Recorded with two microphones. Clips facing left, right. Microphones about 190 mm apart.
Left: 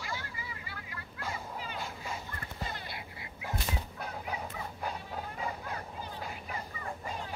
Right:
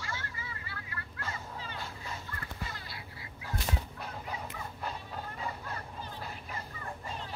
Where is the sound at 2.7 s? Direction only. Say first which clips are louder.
Left 3 dB; 20° left (ahead or behind).